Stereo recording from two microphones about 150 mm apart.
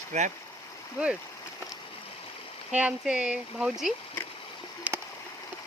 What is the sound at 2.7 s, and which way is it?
Speech, 10° right (ahead or behind).